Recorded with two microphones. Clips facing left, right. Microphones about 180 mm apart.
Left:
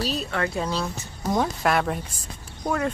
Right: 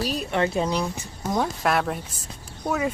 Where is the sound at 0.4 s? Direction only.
20° right (ahead or behind).